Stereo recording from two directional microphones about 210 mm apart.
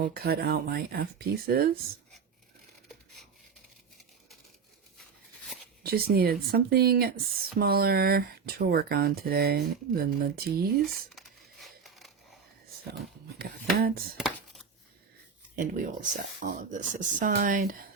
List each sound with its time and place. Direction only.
0.0 s speech: 45° right (ahead or behind)
5.8 s speech: 45° right (ahead or behind)
10.8 s crumpling: centre (ahead or behind)
13.4 s speech: 45° right (ahead or behind)
14.2 s a sound: centre (ahead or behind)
15.5 s speech: 40° right (ahead or behind)